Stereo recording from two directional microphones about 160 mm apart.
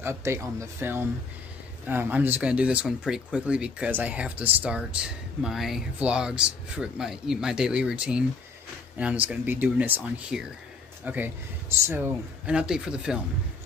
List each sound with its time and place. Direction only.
0.0 s speech: 15° right (ahead or behind)